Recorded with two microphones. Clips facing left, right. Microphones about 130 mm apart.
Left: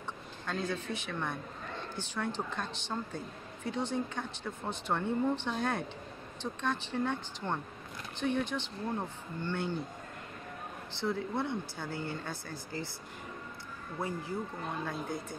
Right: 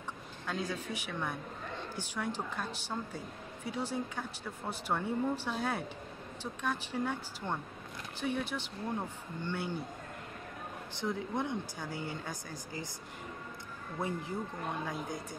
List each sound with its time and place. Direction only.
0.5 s speech: 10° right (ahead or behind)
10.9 s speech: 15° right (ahead or behind)
14.0 s speech: 20° right (ahead or behind)